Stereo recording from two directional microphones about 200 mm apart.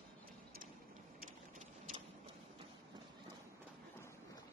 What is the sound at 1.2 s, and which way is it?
Vehicle, 40° right (ahead or behind).